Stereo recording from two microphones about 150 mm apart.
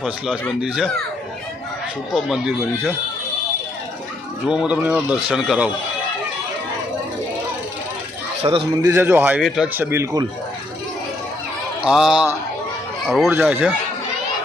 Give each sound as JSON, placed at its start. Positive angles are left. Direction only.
{"t": 0.6, "sound": "speech", "side_deg": -5}
{"t": 4.4, "sound": "speech", "side_deg": -5}
{"t": 8.4, "sound": "a man's voice", "side_deg": -30}
{"t": 8.8, "sound": "a man's voice", "side_deg": -15}
{"t": 9.8, "sound": "speech", "side_deg": -20}
{"t": 11.9, "sound": "speech", "side_deg": -5}
{"t": 13.3, "sound": "a man's voice", "side_deg": -10}